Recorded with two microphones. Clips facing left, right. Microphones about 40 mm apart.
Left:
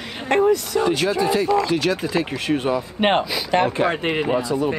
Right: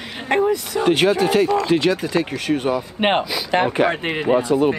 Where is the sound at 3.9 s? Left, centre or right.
Centre.